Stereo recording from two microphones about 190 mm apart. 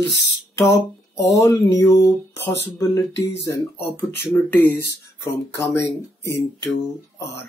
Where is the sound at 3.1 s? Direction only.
70° left (ahead or behind).